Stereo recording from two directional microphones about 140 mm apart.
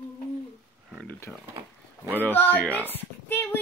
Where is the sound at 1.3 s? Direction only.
5° left (ahead or behind).